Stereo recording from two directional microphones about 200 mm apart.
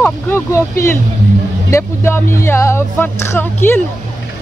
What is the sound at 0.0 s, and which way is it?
Speech, 15° left (ahead or behind).